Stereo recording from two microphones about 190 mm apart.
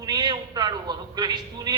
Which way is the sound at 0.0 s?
20° right (ahead or behind).